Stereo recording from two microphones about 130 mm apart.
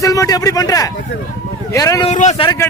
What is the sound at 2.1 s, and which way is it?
Speech, 60° left (ahead or behind).